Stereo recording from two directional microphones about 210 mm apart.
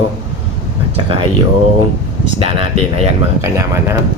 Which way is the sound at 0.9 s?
25° right (ahead or behind).